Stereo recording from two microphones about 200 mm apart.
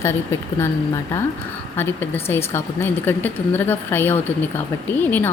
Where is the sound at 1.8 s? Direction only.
10° left (ahead or behind).